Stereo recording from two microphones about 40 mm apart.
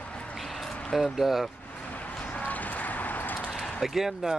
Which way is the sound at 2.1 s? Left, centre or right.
Left.